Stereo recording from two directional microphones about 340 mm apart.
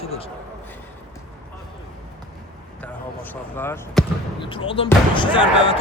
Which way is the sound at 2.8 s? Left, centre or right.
Centre.